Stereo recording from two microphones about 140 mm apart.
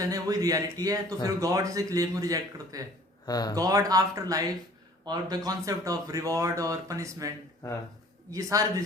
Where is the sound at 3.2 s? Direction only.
25° left (ahead or behind).